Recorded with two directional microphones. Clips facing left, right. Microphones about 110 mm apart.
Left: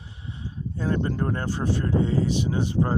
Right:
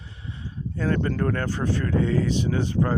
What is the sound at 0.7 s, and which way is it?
Speech, 25° left (ahead or behind).